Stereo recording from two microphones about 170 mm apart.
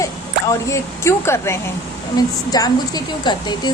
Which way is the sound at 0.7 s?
15° left (ahead or behind).